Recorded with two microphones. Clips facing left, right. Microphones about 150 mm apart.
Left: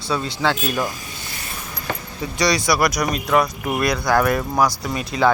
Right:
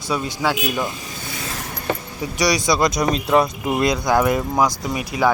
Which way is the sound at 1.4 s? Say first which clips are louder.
Right 6 dB; 90° right.